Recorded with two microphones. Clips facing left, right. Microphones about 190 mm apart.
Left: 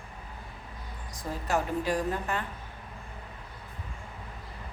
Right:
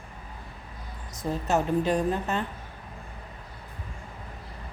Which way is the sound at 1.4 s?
20° right (ahead or behind).